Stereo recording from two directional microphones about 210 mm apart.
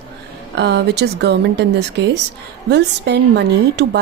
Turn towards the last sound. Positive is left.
turn(degrees=-55)  # may be behind; listen again after turning